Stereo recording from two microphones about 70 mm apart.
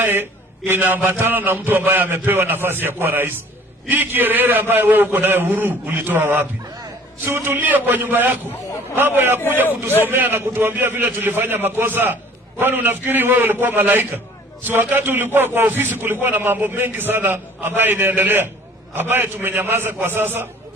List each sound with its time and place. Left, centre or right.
0.0 s a man's voice: right